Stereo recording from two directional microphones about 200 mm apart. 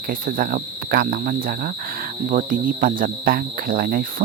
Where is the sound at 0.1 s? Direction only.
45° right (ahead or behind).